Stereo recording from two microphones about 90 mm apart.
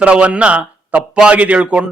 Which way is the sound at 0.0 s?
15° right (ahead or behind).